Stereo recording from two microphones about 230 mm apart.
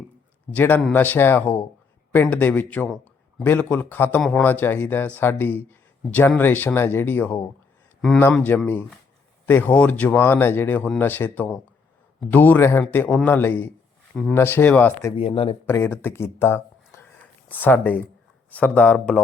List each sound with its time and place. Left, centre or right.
0.5 s a man's voice: centre
15.2 s speech: left
15.6 s a man's voice: centre